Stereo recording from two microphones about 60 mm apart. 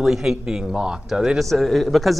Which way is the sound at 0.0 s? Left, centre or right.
Centre.